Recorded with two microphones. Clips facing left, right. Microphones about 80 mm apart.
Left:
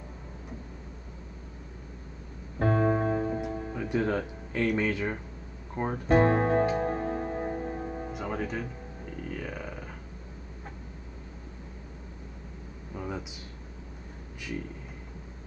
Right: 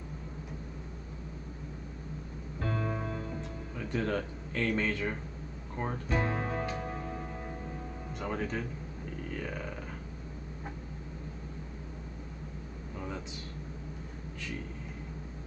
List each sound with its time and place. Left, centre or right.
2.6 s music: left
3.7 s speech: centre
6.0 s speech: left
6.7 s music: left
8.1 s speech: centre
9.3 s a sound: centre
12.9 s a sound: centre